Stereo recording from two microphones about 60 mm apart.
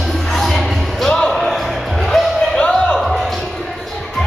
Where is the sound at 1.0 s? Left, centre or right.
Centre.